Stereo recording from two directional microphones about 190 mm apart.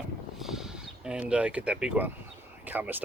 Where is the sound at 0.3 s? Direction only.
Centre (ahead or behind).